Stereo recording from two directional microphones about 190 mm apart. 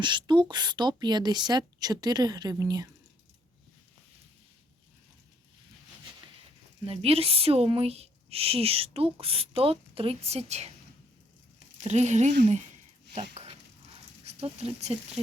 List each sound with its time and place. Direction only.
0.0 s a woman's voice: 25° right (ahead or behind)
6.8 s speech: 30° right (ahead or behind)
11.8 s speech: 35° right (ahead or behind)
13.3 s dog: 30° right (ahead or behind)
14.3 s speech: 35° right (ahead or behind)